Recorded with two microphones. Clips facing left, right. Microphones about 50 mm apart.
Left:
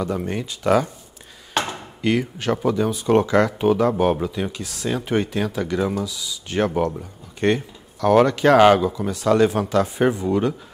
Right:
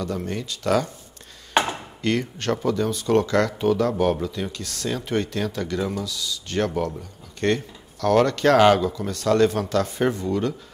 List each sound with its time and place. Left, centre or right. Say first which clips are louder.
0.0 s speech: left 3 dB; centre
1.5 s chopping: right 3 dB; centre
2.0 s speech: left 4 dB; centre